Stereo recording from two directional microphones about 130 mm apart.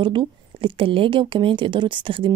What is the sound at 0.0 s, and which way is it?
A woman's voice, 40° right (ahead or behind).